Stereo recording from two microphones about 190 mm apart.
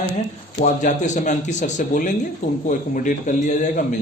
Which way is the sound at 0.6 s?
40° left (ahead or behind).